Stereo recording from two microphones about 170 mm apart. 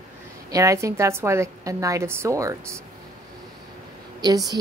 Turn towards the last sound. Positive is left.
turn(degrees=-20)  # may be behind; listen again after turning